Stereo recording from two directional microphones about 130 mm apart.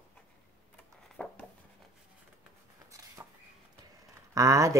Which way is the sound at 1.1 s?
10° left (ahead or behind).